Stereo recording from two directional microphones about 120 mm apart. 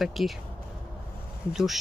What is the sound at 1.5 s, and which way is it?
Speech, 5° right (ahead or behind).